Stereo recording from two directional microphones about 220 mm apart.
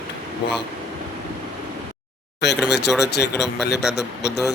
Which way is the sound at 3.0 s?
50° left (ahead or behind).